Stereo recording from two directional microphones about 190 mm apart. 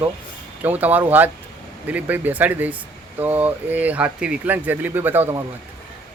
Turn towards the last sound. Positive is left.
turn(degrees=-15)  # may be behind; listen again after turning